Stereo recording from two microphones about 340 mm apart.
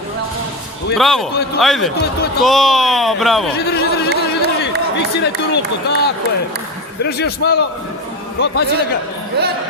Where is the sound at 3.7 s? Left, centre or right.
Left.